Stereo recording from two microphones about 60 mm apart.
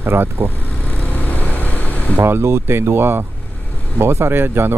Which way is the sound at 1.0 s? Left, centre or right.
Left.